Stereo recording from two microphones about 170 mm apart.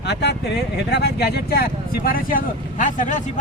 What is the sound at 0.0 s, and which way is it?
Speech, 85° left.